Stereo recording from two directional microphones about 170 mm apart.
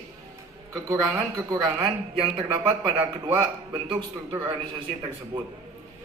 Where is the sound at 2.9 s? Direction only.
10° right (ahead or behind).